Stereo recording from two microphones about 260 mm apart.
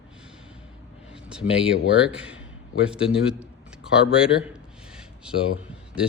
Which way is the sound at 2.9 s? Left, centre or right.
Centre.